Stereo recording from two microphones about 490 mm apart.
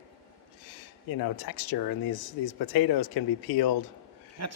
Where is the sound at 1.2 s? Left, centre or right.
Left.